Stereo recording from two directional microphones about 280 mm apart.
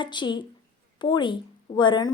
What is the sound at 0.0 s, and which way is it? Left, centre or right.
A woman's voice, centre.